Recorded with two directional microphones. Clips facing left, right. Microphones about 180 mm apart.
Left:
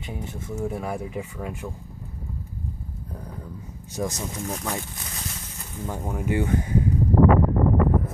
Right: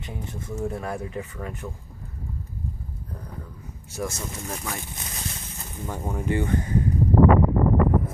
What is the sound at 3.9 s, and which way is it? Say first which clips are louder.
Speech: left 2 dB; 15° left (ahead or behind).